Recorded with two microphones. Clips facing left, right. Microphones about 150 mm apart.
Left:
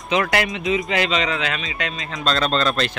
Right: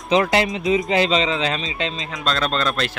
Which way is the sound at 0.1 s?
25° right (ahead or behind).